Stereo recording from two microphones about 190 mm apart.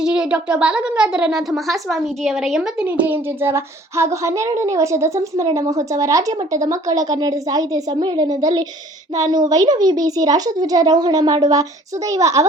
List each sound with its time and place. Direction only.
0.0 s a woman's voice: 5° right (ahead or behind)